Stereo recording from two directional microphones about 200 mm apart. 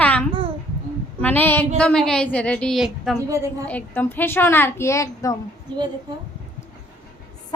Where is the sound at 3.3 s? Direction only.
15° right (ahead or behind).